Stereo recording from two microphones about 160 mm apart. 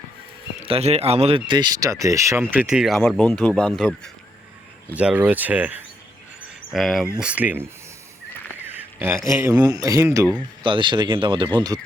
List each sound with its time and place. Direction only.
0.6 s speech: 35° right (ahead or behind); by 4.1 s 5° left (ahead or behind)
4.9 s speech: 10° right (ahead or behind)
10.6 s speech: 30° right (ahead or behind)